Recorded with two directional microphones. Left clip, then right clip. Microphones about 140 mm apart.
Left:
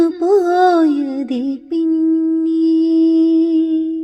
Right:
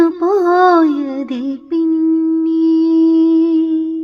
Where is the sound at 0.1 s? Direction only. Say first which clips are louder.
Right 1 dB; 40° left (ahead or behind).